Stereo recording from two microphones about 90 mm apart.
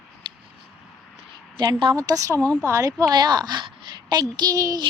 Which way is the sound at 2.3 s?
15° left (ahead or behind).